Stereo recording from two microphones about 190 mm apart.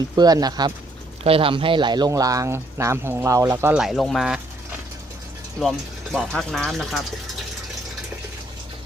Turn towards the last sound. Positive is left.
turn(degrees=0)  # may be behind; listen again after turning